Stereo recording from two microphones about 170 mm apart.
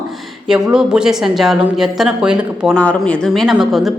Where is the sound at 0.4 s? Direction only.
5° right (ahead or behind).